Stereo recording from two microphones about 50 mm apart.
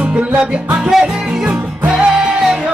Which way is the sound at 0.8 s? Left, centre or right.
Centre.